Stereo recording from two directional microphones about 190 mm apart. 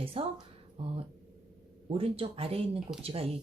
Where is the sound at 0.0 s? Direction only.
30° right (ahead or behind).